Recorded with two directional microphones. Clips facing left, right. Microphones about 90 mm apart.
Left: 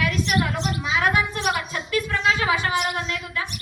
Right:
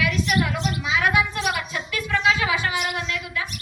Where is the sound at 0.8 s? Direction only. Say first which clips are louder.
Even; 35° left (ahead or behind).